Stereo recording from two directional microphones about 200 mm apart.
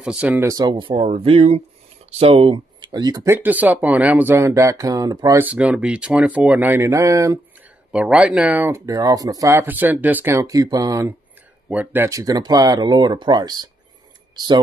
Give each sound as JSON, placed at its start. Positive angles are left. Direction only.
{"t": 0.0, "sound": "speech", "side_deg": -5}
{"t": 5.5, "sound": "speech", "side_deg": -5}
{"t": 7.9, "sound": "speech", "side_deg": -5}